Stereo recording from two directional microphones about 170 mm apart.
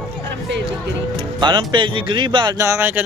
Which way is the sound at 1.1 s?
25° right (ahead or behind).